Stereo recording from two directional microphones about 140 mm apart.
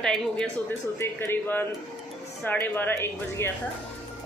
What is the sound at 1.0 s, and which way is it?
Speech, 15° left (ahead or behind).